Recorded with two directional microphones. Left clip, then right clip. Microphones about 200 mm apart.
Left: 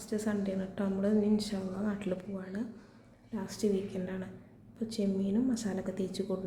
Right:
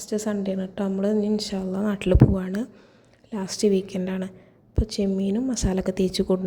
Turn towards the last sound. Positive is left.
turn(degrees=-40)  # may be behind; listen again after turning